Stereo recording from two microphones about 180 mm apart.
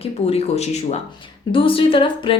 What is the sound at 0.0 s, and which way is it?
Speech, 35° left (ahead or behind).